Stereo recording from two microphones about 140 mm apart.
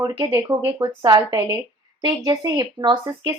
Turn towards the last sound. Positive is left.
turn(degrees=-30)  # may be behind; listen again after turning